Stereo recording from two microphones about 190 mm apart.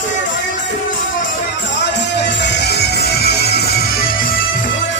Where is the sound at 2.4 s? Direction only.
65° left (ahead or behind).